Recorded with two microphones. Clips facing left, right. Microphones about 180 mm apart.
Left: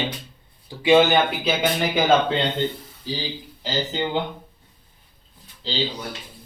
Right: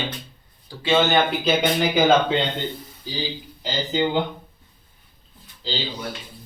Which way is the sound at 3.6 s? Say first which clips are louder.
Right 2 dB; centre (ahead or behind).